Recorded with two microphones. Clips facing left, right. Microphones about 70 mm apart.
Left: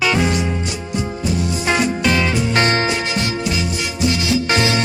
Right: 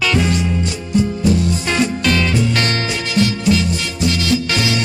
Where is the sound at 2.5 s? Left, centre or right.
Left.